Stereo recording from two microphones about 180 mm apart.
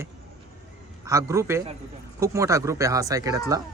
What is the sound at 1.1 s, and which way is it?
Speech, 15° right (ahead or behind).